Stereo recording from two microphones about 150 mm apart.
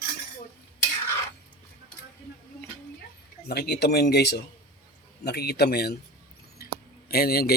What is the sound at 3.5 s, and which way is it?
Speech, 90° left.